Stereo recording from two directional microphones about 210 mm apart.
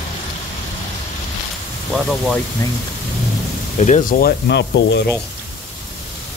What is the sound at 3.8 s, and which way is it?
Speech, 40° left (ahead or behind).